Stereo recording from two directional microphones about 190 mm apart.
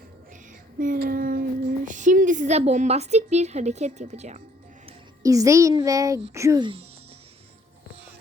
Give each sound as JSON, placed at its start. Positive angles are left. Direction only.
{"t": 0.8, "sound": "child singing", "side_deg": -50}
{"t": 5.2, "sound": "a child's voice", "side_deg": -15}